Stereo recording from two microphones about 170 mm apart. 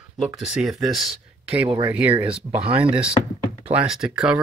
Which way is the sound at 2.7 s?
30° right (ahead or behind).